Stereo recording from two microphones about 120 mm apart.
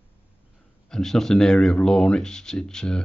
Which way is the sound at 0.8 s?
5° left (ahead or behind).